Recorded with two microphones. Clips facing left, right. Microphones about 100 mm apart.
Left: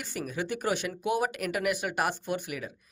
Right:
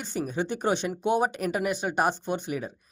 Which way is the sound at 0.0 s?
25° right (ahead or behind).